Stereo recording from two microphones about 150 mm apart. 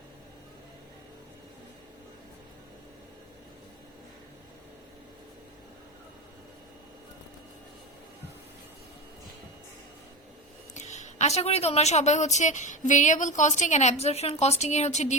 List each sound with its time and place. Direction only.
10.8 s a woman's voice: 50° left (ahead or behind)